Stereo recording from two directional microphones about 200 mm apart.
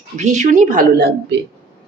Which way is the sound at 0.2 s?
35° right (ahead or behind).